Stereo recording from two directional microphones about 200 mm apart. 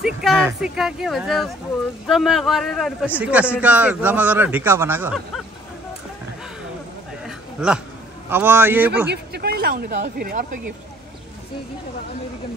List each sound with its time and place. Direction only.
0.0 s a man's voice: centre (ahead or behind)
7.2 s a sound: 5° right (ahead or behind)
8.3 s a man's voice: 10° right (ahead or behind)
9.1 s speech: 50° right (ahead or behind)